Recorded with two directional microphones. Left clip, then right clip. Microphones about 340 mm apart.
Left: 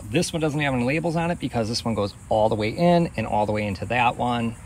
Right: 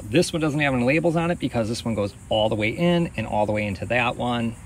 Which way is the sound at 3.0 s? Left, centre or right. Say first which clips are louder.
Even; left.